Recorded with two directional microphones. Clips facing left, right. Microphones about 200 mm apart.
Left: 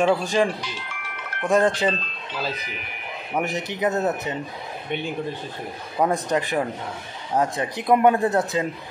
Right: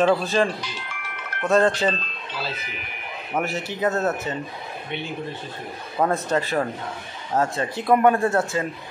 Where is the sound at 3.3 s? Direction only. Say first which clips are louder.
Even; 15° left (ahead or behind).